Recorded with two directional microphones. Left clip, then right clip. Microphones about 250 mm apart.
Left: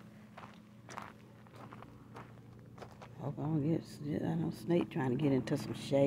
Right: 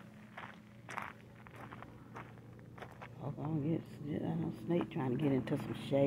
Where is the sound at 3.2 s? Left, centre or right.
Centre.